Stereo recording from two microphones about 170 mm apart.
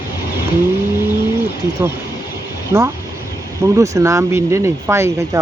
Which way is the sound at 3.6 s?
15° right (ahead or behind).